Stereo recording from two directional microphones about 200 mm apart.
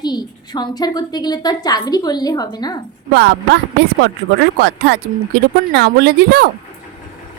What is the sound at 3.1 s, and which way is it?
Speech, 60° right (ahead or behind).